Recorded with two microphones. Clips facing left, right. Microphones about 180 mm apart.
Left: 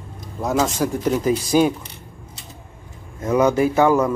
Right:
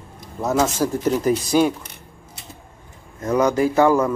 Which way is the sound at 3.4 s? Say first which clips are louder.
Even; 20° left (ahead or behind).